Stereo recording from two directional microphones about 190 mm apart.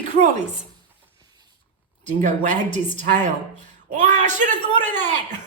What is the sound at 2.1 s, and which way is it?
A woman's voice, 40° right (ahead or behind).